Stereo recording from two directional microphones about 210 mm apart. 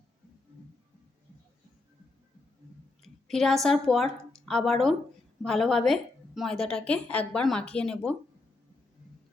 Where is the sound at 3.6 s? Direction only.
Centre (ahead or behind).